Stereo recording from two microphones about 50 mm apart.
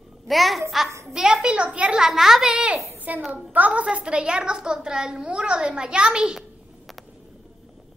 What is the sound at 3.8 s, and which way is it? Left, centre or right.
A woman's voice, centre.